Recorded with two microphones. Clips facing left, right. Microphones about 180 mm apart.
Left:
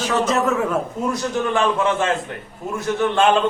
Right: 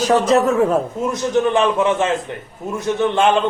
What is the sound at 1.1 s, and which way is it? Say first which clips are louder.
A man's voice: right 6 dB; 20° right (ahead or behind).